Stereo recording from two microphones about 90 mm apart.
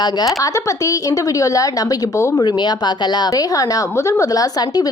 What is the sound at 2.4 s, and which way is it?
A woman's voice, 50° left (ahead or behind).